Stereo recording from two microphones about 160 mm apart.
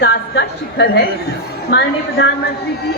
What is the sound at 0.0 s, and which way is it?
A woman's voice, 90° left.